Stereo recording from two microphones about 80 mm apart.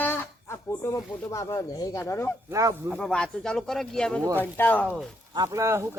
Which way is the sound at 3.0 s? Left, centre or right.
Centre.